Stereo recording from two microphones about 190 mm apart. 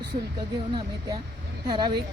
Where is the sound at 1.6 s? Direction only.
25° right (ahead or behind).